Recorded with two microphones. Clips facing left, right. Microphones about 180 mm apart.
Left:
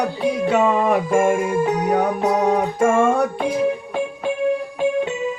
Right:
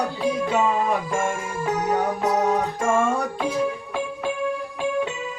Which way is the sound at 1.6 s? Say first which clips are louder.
Left 5 dB; 15° left (ahead or behind).